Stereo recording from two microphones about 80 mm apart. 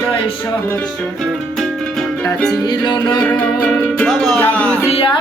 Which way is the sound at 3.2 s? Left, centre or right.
Left.